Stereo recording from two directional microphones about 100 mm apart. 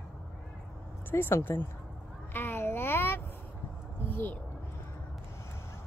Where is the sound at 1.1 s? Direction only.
25° left (ahead or behind).